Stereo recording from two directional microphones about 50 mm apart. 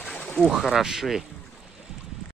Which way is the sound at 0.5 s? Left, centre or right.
Centre.